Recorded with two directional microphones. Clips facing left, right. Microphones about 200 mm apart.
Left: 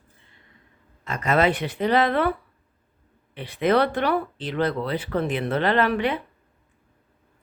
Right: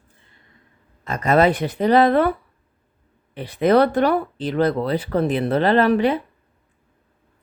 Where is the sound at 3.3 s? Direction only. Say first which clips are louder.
Right 5 dB; 40° right (ahead or behind).